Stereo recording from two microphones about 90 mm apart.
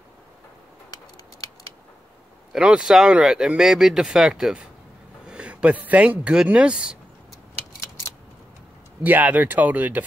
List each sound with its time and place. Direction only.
0.8 s a sound: 45° left (ahead or behind)
2.5 s speech: 5° right (ahead or behind)
9.0 s speech: 20° right (ahead or behind)